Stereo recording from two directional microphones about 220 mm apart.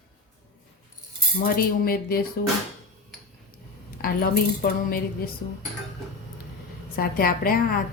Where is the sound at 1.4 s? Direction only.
40° left (ahead or behind).